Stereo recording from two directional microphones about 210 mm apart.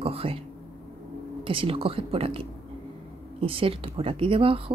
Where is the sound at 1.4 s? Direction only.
25° right (ahead or behind).